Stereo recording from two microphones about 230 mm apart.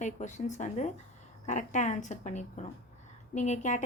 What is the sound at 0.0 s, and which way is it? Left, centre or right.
A woman's voice, left.